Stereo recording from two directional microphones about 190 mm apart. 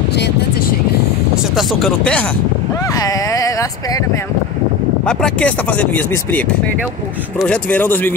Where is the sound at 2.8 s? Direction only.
20° left (ahead or behind).